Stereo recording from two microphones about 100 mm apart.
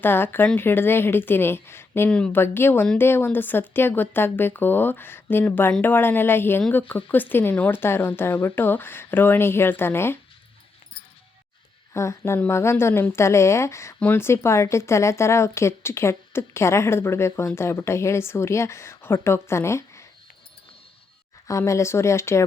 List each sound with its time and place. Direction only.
0.0 s speech: 20° left (ahead or behind)
2.0 s speech: 10° left (ahead or behind)
2.3 s speech: 20° left (ahead or behind)
11.9 s speech: 30° left (ahead or behind)
21.4 s speech: 30° left (ahead or behind)